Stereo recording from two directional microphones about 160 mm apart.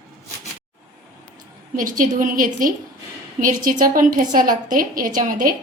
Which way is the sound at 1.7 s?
55° right (ahead or behind).